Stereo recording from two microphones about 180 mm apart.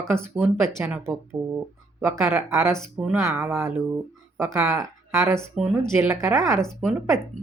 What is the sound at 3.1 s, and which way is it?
Speech, 15° right (ahead or behind).